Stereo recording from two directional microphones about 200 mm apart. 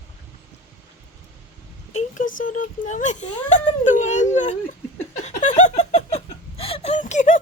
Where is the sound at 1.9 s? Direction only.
40° left (ahead or behind).